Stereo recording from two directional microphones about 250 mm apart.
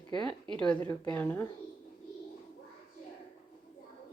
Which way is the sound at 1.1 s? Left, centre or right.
Centre.